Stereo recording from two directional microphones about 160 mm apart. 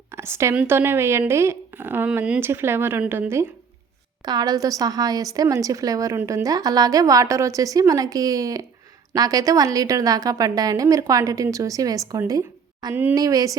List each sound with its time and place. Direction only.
0.1 s speech: 15° right (ahead or behind)
4.3 s a woman's voice: 25° right (ahead or behind)
12.9 s speech: 10° right (ahead or behind)
13.1 s a woman's voice: 20° right (ahead or behind)